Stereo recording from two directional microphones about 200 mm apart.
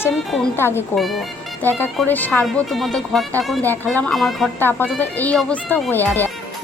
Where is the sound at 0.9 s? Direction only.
Centre (ahead or behind).